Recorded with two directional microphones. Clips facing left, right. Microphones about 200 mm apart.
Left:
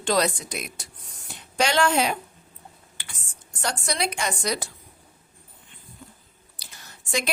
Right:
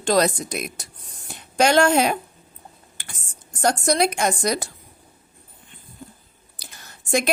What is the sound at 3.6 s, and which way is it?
A woman's voice, 45° right (ahead or behind).